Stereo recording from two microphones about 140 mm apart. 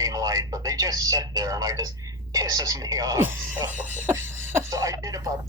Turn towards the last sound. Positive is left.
turn(degrees=-25)  # may be behind; listen again after turning